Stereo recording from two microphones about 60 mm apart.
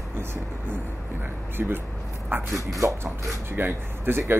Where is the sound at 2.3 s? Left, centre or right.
Right.